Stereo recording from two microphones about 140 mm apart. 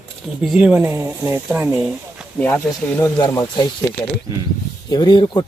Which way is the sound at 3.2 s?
30° left (ahead or behind).